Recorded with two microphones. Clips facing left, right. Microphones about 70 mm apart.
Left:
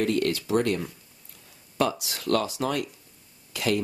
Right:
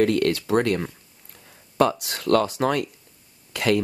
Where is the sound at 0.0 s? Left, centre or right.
Right.